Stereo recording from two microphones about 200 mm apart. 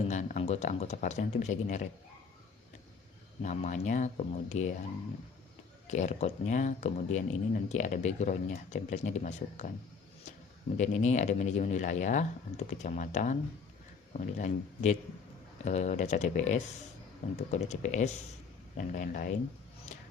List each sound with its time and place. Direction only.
0.1 s speech: 35° left (ahead or behind)
3.4 s speech: 35° left (ahead or behind)
5.9 s speech: 35° left (ahead or behind)
10.8 s speech: 35° left (ahead or behind)